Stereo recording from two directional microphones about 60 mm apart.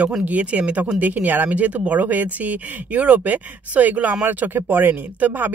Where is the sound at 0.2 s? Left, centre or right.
Right.